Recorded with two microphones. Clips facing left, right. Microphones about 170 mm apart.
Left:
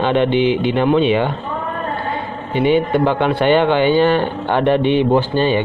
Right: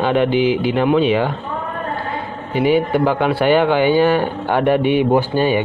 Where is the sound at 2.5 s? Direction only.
5° right (ahead or behind).